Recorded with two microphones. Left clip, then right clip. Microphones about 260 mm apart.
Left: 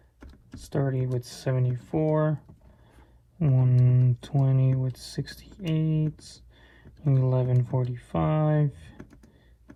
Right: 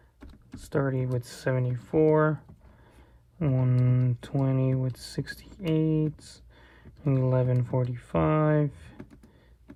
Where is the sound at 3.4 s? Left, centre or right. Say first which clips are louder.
Even; right.